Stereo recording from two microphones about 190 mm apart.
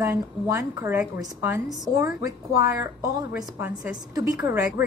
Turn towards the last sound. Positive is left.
turn(degrees=-15)  # may be behind; listen again after turning